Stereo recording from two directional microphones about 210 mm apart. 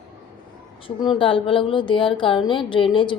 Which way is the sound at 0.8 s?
20° left (ahead or behind).